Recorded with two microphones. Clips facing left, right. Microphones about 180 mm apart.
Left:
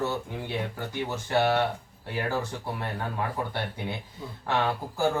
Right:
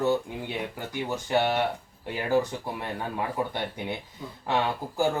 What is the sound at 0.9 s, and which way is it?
Speech, 15° right (ahead or behind).